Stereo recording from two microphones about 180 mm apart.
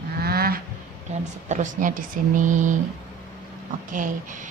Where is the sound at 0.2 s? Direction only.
60° right (ahead or behind).